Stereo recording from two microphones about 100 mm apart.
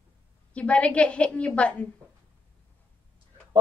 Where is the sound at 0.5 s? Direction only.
10° left (ahead or behind).